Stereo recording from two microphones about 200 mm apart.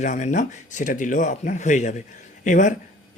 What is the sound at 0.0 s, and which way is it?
Speech, 35° left (ahead or behind).